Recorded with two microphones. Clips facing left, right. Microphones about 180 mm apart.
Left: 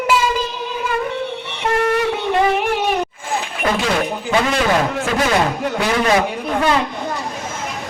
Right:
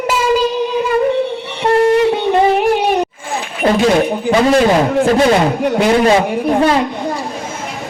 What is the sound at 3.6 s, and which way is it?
A man's voice, 35° right (ahead or behind).